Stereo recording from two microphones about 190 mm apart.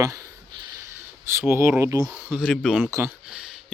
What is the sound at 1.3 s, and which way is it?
Speech, 15° right (ahead or behind).